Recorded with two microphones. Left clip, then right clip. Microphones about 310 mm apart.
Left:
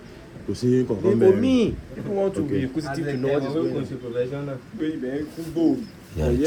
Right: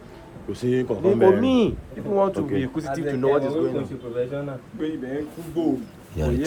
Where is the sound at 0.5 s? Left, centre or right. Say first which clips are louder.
Left 1 dB; centre.